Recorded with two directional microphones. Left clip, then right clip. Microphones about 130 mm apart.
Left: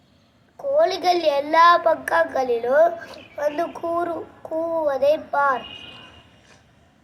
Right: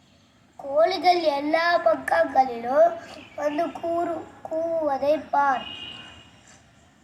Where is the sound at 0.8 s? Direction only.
15° left (ahead or behind).